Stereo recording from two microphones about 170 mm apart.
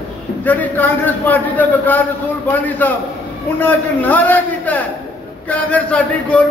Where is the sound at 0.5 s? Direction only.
10° left (ahead or behind).